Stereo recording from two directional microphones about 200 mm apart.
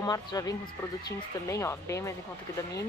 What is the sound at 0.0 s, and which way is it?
Speech, 20° left (ahead or behind).